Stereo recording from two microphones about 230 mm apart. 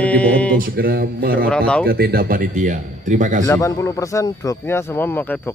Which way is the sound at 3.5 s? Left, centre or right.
Centre.